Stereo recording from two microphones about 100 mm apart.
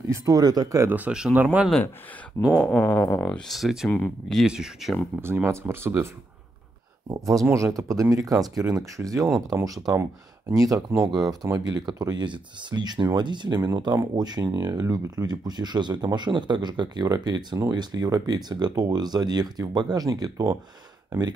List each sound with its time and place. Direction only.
0.1 s speech: 35° right (ahead or behind)
0.8 s speech: 15° right (ahead or behind)
2.4 s speech: centre (ahead or behind)
2.8 s speech: 15° left (ahead or behind); by 3.9 s 5° right (ahead or behind)
3.9 s speech: 15° left (ahead or behind)
4.4 s speech: 5° right (ahead or behind)
5.2 s speech: 25° right (ahead or behind)
7.1 s speech: 35° right (ahead or behind); by 13.6 s 50° right (ahead or behind)
13.6 s speech: 40° right (ahead or behind)